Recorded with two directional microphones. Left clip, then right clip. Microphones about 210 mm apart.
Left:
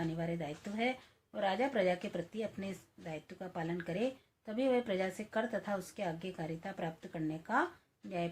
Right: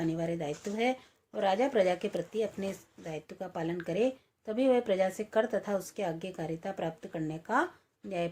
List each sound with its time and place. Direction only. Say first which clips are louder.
0.2 s speech: right 6 dB; 45° right (ahead or behind)